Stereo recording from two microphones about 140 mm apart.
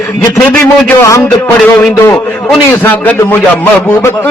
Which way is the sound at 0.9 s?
20° left (ahead or behind).